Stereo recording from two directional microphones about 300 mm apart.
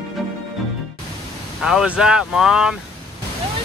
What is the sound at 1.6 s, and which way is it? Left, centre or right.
Speech, centre.